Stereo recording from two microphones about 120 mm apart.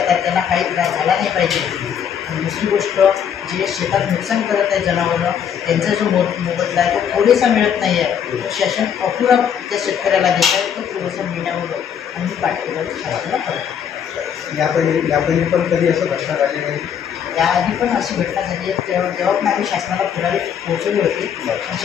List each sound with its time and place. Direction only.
0.0 s a man's voice: centre (ahead or behind)
14.6 s a man's voice: centre (ahead or behind)